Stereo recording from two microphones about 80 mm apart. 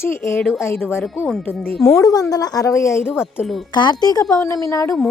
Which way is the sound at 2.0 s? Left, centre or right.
Left.